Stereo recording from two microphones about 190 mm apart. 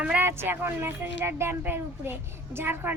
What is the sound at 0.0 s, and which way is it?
A woman's voice, 10° right (ahead or behind).